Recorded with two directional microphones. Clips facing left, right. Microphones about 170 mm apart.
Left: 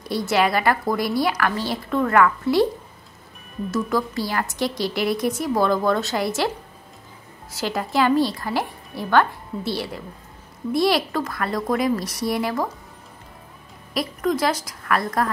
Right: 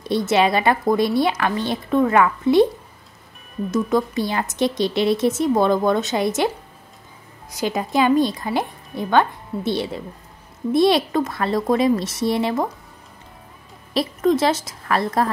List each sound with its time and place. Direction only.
0.0 s a woman's voice: 20° right (ahead or behind)
3.7 s a woman's voice: 20° right (ahead or behind)
7.5 s a woman's voice: 20° right (ahead or behind)
13.9 s a woman's voice: 25° right (ahead or behind)